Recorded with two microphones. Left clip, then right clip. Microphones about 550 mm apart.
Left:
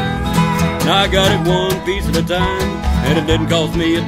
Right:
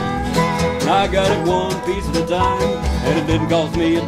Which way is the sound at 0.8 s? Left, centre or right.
Left.